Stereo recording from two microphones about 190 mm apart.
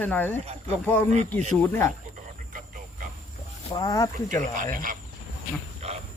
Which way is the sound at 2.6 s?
45° right (ahead or behind).